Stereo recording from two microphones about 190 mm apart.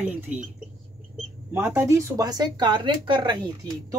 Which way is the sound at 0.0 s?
10° right (ahead or behind).